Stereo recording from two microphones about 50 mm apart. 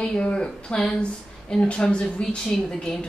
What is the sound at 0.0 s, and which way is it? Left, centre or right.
A woman's voice, left.